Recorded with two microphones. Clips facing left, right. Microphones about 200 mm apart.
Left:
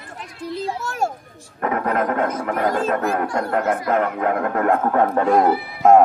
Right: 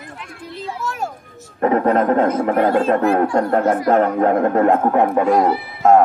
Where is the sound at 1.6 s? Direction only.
30° right (ahead or behind).